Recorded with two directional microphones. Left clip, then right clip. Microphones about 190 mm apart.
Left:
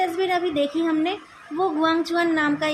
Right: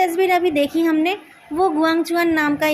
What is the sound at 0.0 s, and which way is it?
A woman's voice, 20° right (ahead or behind).